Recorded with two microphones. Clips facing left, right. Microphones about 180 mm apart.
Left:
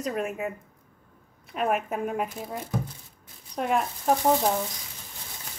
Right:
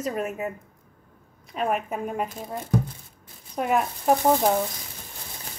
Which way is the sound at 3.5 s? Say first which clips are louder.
Right 2 dB; 5° right (ahead or behind).